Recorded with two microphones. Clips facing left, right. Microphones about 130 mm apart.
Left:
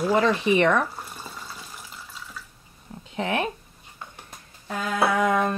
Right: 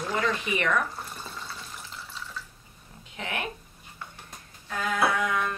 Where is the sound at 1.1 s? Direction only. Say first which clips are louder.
Even; 10° left (ahead or behind).